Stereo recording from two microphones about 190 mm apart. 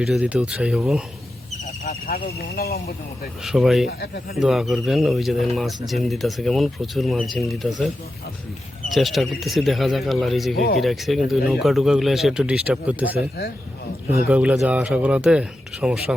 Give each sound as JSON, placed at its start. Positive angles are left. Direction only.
{"t": 0.0, "sound": "speech", "side_deg": -5}
{"t": 1.9, "sound": "speech", "side_deg": 50}
{"t": 3.4, "sound": "speech", "side_deg": 0}
{"t": 3.8, "sound": "speech", "side_deg": 55}
{"t": 4.4, "sound": "speech", "side_deg": 0}
{"t": 8.9, "sound": "speech", "side_deg": 0}
{"t": 10.5, "sound": "speech", "side_deg": 55}
{"t": 10.8, "sound": "speech", "side_deg": 0}
{"t": 13.1, "sound": "speech", "side_deg": 55}
{"t": 14.1, "sound": "speech", "side_deg": -5}